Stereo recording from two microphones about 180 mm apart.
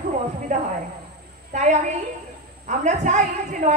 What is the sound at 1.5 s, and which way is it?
A woman's voice, 40° right (ahead or behind).